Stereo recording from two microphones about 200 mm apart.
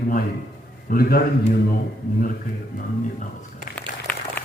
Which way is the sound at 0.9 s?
50° left (ahead or behind).